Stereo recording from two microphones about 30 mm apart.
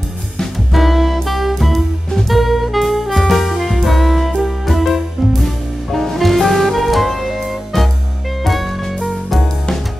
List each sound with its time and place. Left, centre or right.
0.7 s music: centre